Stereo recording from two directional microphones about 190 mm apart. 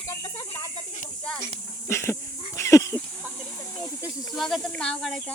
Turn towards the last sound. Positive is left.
turn(degrees=5)  # may be behind; listen again after turning